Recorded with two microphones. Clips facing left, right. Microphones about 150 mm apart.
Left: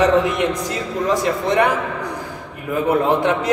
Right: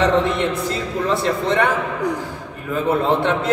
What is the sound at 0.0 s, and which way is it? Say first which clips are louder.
A man's voice: left 2 dB; 10° left (ahead or behind).